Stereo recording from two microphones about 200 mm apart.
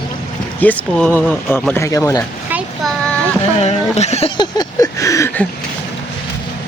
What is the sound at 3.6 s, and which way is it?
Speech, 35° left (ahead or behind).